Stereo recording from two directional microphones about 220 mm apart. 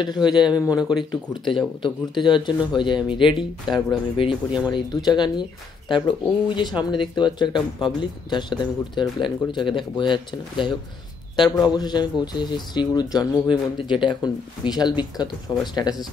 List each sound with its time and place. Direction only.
0.3 s speech: 20° left (ahead or behind)
0.7 s speech: 5° right (ahead or behind)
1.8 s speech: 20° left (ahead or behind)
11.4 s speech: centre (ahead or behind)
11.7 s speech: 20° left (ahead or behind)